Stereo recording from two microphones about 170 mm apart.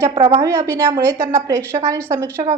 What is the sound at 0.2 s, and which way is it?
Speech, 40° right (ahead or behind).